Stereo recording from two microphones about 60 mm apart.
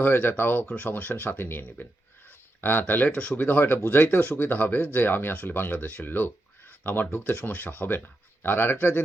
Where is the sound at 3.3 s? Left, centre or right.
Left.